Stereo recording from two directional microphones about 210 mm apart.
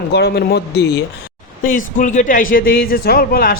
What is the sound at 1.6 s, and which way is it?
Speech, 40° left (ahead or behind).